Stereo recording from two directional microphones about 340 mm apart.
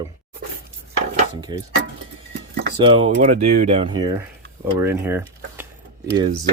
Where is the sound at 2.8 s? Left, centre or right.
Centre.